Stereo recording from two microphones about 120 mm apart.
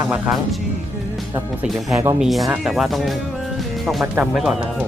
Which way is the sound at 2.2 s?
Centre (ahead or behind).